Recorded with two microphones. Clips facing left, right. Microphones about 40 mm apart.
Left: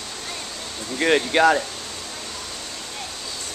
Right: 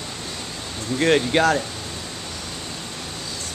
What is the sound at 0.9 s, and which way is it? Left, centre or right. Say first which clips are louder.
Speech: right 1 dB; centre.